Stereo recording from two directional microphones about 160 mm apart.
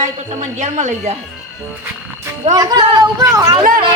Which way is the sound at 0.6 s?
50° right (ahead or behind).